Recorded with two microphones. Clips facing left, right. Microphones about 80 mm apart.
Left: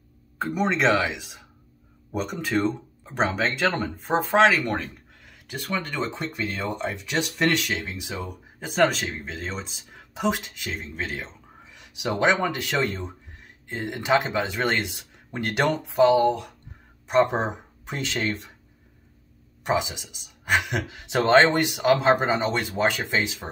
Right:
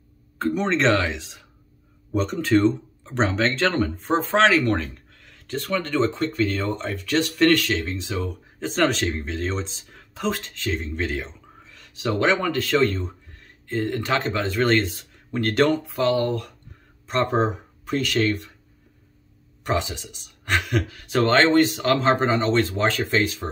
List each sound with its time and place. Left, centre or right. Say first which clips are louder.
0.4 s speech: right 2 dB; centre
11.6 s speech: right 3 dB; centre
19.6 s speech: even; centre